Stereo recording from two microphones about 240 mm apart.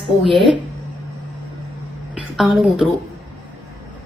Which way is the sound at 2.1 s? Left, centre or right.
Centre.